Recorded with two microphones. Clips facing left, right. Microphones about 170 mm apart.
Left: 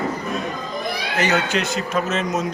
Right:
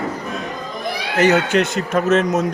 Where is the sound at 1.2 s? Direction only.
55° right (ahead or behind).